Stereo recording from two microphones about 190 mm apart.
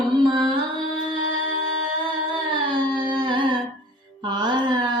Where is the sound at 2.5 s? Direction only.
25° right (ahead or behind).